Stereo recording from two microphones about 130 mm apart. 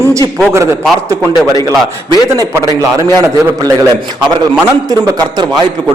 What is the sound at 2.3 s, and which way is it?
A man's voice, 25° right (ahead or behind).